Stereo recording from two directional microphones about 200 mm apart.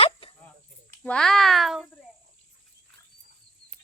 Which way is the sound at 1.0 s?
5° left (ahead or behind).